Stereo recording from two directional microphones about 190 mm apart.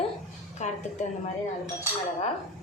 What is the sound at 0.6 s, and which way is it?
Speech, 40° left (ahead or behind).